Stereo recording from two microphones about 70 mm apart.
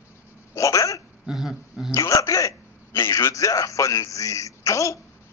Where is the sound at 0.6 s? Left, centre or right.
Left.